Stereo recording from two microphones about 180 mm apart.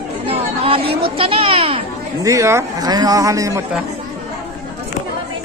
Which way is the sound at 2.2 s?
15° right (ahead or behind).